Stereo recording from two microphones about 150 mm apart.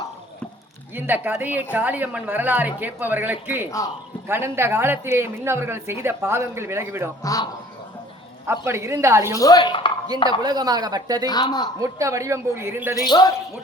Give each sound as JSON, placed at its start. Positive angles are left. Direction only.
{"t": 0.9, "sound": "speech", "side_deg": -10}
{"t": 7.2, "sound": "speech", "side_deg": 20}
{"t": 8.6, "sound": "speech", "side_deg": -20}
{"t": 9.4, "sound": "speech", "side_deg": 25}
{"t": 10.4, "sound": "speech", "side_deg": -25}
{"t": 11.3, "sound": "speech", "side_deg": 25}
{"t": 11.8, "sound": "speech", "side_deg": -20}
{"t": 13.0, "sound": "speech", "side_deg": 25}